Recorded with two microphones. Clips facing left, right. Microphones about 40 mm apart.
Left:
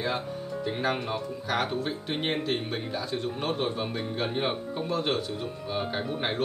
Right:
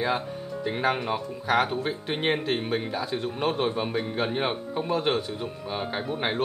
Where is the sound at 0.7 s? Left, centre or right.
Centre.